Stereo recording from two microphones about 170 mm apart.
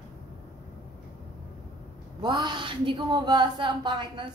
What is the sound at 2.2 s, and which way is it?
A woman's voice, 25° right (ahead or behind).